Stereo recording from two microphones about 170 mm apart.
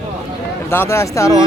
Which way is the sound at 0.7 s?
15° left (ahead or behind).